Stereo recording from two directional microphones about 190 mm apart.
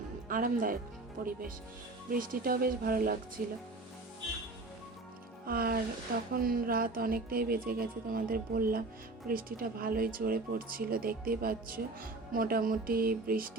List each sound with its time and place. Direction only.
0.3 s speech: 45° right (ahead or behind)
5.5 s speech: 50° right (ahead or behind)